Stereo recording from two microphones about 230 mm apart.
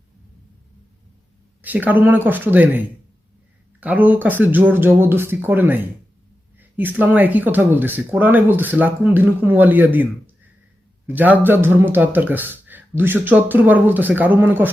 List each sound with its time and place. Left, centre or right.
1.6 s speech: centre